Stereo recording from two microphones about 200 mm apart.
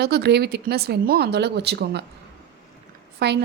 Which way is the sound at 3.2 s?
55° right (ahead or behind).